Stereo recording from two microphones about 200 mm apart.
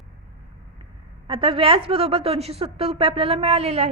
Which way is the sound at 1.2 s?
25° right (ahead or behind).